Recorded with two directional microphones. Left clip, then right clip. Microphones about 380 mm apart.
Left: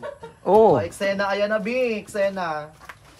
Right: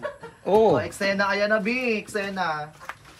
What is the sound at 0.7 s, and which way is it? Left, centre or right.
Speech, centre.